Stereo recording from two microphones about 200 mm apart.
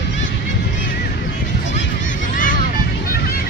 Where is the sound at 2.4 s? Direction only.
45° left (ahead or behind).